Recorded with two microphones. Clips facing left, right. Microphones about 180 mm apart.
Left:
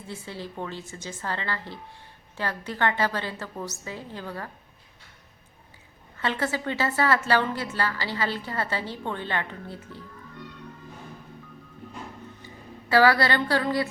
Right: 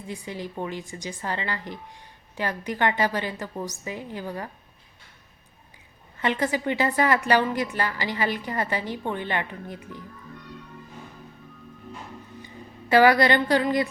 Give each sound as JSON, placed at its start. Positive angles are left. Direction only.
{"t": 0.1, "sound": "a woman's voice", "side_deg": -15}
{"t": 6.1, "sound": "a woman's voice", "side_deg": -15}
{"t": 12.9, "sound": "a woman's voice", "side_deg": -20}